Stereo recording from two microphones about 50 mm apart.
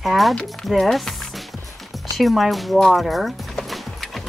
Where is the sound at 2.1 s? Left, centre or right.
Centre.